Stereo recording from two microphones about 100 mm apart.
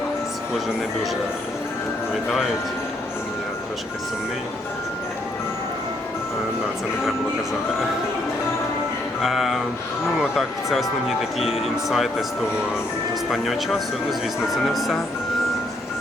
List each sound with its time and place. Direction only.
9.2 s speech: centre (ahead or behind)
13.3 s speech: centre (ahead or behind)